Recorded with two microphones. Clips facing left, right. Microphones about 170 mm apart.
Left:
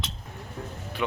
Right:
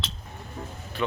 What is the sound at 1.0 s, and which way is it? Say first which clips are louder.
Speech: right 1 dB; 10° left (ahead or behind).